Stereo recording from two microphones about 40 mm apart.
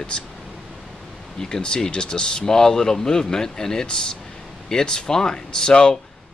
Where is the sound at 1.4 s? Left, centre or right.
Centre.